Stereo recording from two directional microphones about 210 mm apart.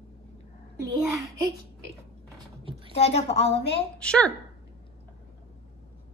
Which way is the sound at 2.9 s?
30° left (ahead or behind).